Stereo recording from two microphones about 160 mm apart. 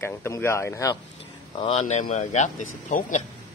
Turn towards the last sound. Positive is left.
turn(degrees=50)  # may be behind; listen again after turning